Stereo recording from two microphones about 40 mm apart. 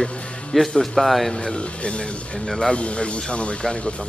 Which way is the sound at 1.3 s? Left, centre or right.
Left.